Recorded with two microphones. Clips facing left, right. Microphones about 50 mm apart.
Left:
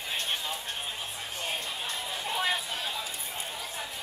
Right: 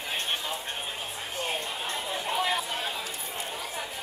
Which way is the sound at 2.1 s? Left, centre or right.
Centre.